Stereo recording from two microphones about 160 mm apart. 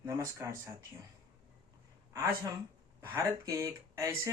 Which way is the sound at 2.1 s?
20° right (ahead or behind).